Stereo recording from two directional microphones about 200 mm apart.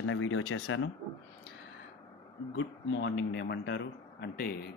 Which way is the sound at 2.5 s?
65° left (ahead or behind).